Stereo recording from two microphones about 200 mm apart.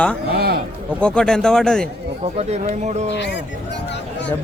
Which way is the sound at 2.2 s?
30° right (ahead or behind).